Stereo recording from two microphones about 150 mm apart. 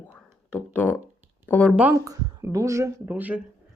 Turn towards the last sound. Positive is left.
turn(degrees=-10)  # may be behind; listen again after turning